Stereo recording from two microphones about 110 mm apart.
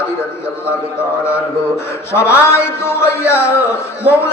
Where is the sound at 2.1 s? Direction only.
20° left (ahead or behind).